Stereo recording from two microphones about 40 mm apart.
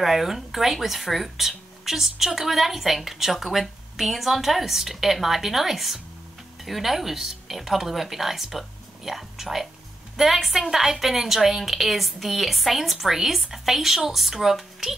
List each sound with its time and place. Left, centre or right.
0.0 s speech: centre